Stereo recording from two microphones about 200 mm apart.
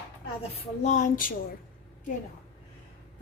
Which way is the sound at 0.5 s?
35° left (ahead or behind).